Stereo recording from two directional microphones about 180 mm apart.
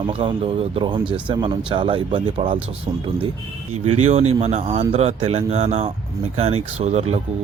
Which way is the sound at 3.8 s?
35° right (ahead or behind).